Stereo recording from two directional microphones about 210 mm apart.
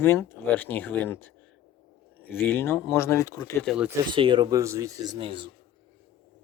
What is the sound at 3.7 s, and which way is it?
Speech, 5° right (ahead or behind).